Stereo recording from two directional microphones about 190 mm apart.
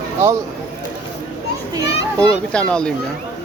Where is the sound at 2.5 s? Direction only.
5° left (ahead or behind).